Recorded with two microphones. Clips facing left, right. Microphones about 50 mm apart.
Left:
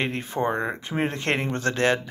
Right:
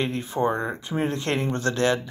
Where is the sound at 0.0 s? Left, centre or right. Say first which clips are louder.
Right 1 dB; left.